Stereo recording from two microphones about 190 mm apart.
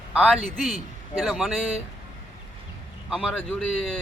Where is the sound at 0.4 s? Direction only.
Centre (ahead or behind).